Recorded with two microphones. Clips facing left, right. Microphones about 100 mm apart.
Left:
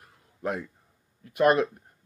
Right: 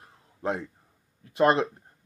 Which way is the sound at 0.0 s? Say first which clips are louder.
Right 1 dB; 25° right (ahead or behind).